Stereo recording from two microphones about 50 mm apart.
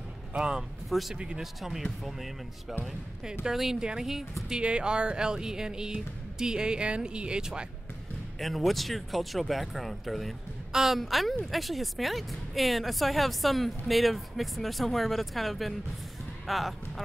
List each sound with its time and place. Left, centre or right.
0.4 s speech: centre
0.8 s speech: centre
1.1 s speech: centre
1.4 s a woman's voice: centre
3.4 s speech: centre
4.5 s speech: centre
8.4 s a woman's voice: centre